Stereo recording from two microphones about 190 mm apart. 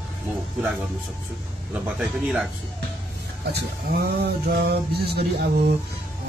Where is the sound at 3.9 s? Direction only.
55° right (ahead or behind).